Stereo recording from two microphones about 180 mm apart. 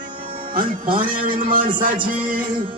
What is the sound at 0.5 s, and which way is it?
A man's voice, 50° right (ahead or behind).